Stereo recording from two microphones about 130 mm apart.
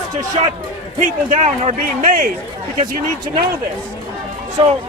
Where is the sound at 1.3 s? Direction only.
60° right (ahead or behind); by 2.3 s 85° right.